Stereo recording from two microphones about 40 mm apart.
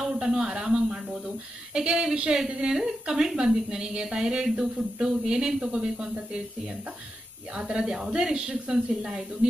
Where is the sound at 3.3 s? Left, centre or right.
Centre.